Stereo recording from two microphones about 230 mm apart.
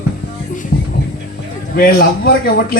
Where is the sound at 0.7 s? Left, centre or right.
Left.